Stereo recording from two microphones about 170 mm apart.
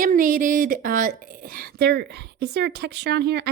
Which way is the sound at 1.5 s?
70° right (ahead or behind).